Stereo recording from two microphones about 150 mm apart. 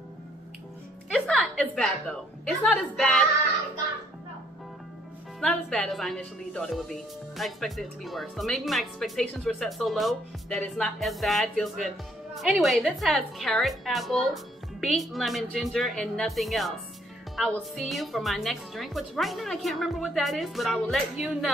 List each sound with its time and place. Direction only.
1.1 s a woman's voice: 5° left (ahead or behind)
5.4 s a woman's voice: 5° left (ahead or behind)